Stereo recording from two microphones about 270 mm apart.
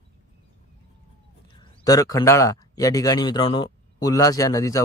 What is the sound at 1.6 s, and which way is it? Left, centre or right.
Speech, centre.